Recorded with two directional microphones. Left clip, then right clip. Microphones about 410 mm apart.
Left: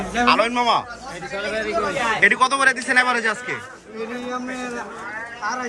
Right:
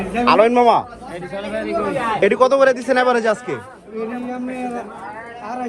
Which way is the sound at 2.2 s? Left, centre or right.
Centre.